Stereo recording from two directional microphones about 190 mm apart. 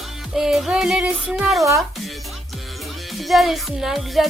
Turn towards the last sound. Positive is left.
turn(degrees=0)  # may be behind; listen again after turning